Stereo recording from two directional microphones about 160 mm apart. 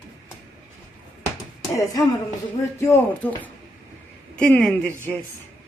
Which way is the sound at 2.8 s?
10° left (ahead or behind).